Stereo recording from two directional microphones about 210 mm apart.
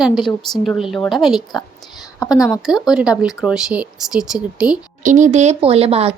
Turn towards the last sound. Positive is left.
turn(degrees=-30)  # may be behind; listen again after turning